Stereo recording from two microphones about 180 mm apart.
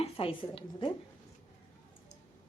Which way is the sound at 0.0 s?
30° left (ahead or behind).